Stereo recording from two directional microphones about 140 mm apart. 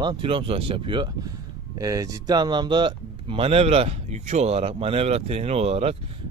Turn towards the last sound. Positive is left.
turn(degrees=-45)  # may be behind; listen again after turning